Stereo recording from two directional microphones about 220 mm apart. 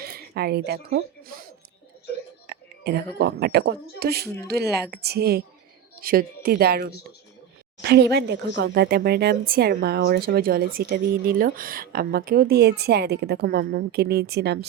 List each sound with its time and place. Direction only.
0.0 s speech: 45° right (ahead or behind)
2.5 s a sound: 50° right (ahead or behind)
3.2 s speech: 45° right (ahead or behind)